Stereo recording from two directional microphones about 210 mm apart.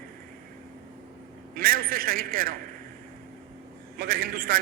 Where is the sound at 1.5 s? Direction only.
45° right (ahead or behind).